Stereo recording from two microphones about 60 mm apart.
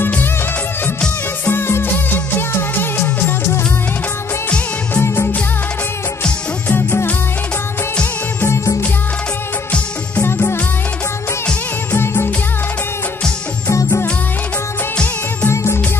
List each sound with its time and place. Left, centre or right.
0.0 s music of bollywood: left
1.4 s music: left
4.9 s music: left
6.7 s music: left
10.2 s music: left
11.9 s music: left
15.5 s music: left